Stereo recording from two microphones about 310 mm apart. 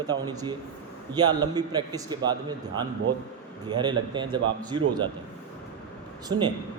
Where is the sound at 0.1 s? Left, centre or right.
Centre.